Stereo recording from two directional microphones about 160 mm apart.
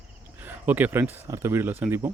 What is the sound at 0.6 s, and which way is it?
Speech, 10° right (ahead or behind).